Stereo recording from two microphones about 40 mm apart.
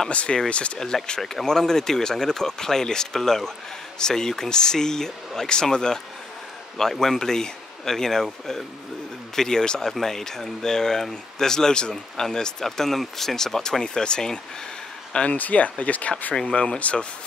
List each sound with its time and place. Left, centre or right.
0.1 s speech: left
1.2 s speech: centre
15.3 s speech: left
16.5 s speech: left